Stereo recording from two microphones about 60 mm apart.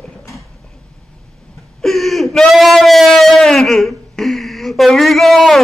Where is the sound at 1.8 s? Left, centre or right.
Centre.